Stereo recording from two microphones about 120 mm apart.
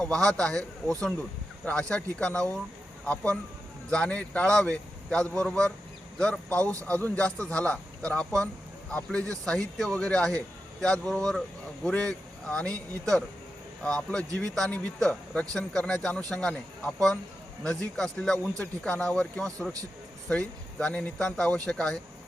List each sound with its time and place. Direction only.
0.0 s a man's voice: 5° left (ahead or behind)
3.8 s a man's voice: 10° left (ahead or behind)
6.6 s speech: 25° right (ahead or behind)
6.8 s a man's voice: 10° left (ahead or behind)